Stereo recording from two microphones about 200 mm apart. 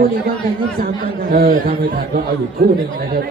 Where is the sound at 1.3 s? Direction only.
45° right (ahead or behind).